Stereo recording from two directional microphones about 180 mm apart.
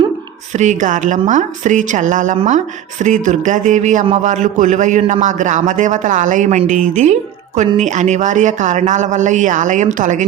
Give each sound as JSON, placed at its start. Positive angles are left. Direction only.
{"t": 0.5, "sound": "a man's voice", "side_deg": -40}